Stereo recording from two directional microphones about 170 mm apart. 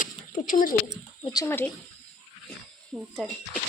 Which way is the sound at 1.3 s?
15° left (ahead or behind).